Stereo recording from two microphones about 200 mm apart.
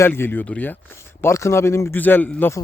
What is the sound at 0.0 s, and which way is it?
Speech, 10° left (ahead or behind).